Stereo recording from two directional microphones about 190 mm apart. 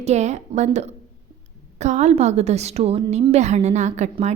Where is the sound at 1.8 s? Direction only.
35° right (ahead or behind).